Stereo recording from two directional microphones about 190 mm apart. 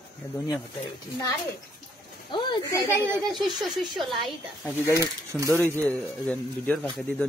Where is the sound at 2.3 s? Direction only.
25° left (ahead or behind).